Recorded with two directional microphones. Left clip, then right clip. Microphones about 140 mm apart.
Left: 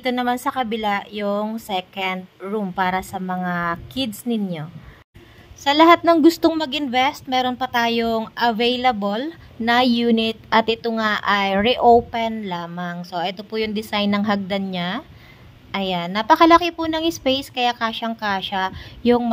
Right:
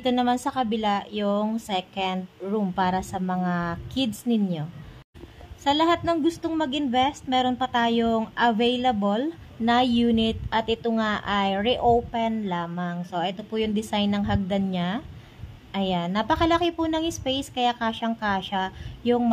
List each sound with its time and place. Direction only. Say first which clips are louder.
0.0 s a woman's voice: left 2 dB; 20° left (ahead or behind)
5.6 s a woman's voice: left 8 dB; 35° left (ahead or behind)